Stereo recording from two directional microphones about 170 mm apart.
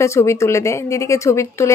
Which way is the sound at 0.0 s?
15° left (ahead or behind).